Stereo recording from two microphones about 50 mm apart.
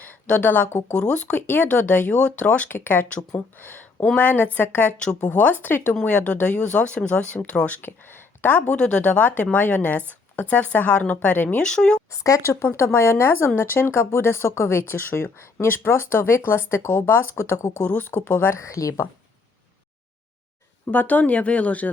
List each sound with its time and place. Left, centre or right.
0.3 s speech: left
0.7 s speech: left
1.3 s speech: left
2.6 s speech: left
8.4 s speech: left
8.7 s speech: left
11.6 s speech: centre
12.1 s speech: left
13.0 s speech: left
17.6 s speech: left
17.8 s speech: left
18.1 s speech: left
18.6 s a woman's voice: left
20.9 s speech: left